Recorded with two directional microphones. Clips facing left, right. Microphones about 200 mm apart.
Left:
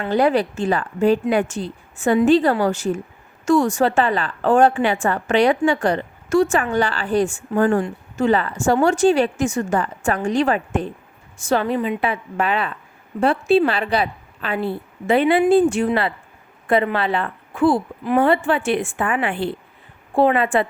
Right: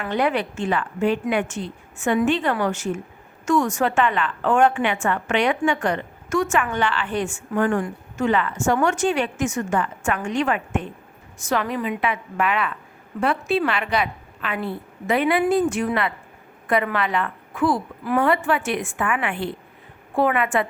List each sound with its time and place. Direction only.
0.1 s a woman's voice: 35° left (ahead or behind)